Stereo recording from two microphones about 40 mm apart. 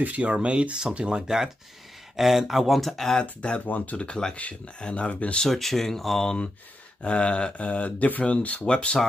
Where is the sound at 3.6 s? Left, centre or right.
Left.